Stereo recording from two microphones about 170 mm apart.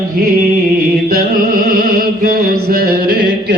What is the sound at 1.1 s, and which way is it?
Music, 55° right (ahead or behind).